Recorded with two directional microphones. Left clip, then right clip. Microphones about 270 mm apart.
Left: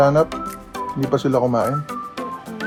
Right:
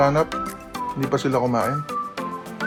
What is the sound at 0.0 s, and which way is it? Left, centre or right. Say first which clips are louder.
Speech: left 3 dB; right.